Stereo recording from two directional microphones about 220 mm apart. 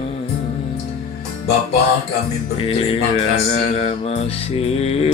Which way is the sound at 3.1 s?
25° left (ahead or behind).